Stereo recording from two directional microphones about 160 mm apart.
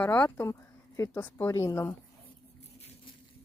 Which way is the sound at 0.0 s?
10° left (ahead or behind).